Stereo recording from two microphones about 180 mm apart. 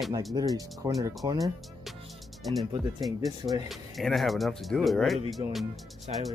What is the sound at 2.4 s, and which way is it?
Speech, centre (ahead or behind).